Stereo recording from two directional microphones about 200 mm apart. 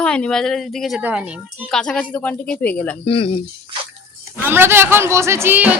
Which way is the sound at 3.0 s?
30° left (ahead or behind).